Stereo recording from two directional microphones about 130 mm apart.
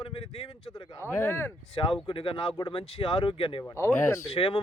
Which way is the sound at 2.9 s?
40° left (ahead or behind).